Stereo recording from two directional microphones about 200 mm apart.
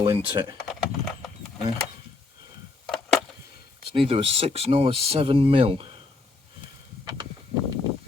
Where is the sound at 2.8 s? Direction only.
Centre (ahead or behind).